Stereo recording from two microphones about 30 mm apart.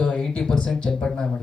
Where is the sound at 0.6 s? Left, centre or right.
Left.